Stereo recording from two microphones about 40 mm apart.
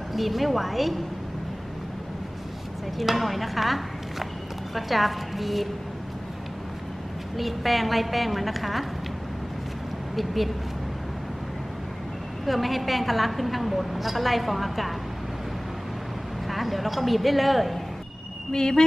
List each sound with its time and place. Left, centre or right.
0.1 s a woman's voice: centre
3.0 s a woman's voice: centre
7.3 s a woman's voice: centre
10.1 s a woman's voice: centre
12.4 s a woman's voice: centre
16.4 s speech: centre
18.5 s speech: centre